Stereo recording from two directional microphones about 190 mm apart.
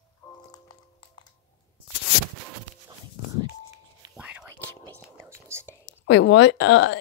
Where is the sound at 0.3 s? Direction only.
20° left (ahead or behind).